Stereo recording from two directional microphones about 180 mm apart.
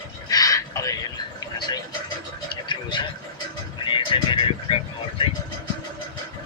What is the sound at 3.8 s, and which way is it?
Vehicle, 25° left (ahead or behind).